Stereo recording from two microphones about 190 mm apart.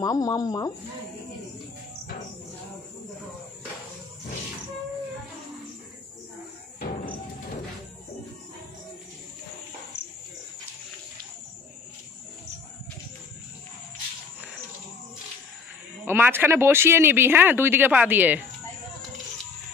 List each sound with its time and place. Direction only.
0.0 s speech: 20° left (ahead or behind)
16.1 s speech: 10° right (ahead or behind)